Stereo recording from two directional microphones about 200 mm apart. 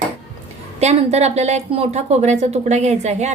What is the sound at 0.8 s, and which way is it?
A woman's voice, 35° right (ahead or behind).